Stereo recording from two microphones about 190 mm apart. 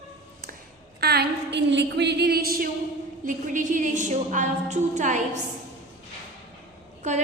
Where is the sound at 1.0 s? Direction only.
55° right (ahead or behind); by 5.4 s 40° right (ahead or behind).